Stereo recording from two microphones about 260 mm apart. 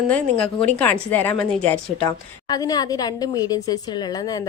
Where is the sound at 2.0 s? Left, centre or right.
Centre.